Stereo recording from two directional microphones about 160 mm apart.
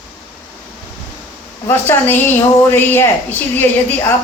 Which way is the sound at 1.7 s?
15° left (ahead or behind).